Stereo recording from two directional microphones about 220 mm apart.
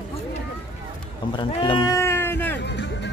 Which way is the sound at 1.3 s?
20° left (ahead or behind).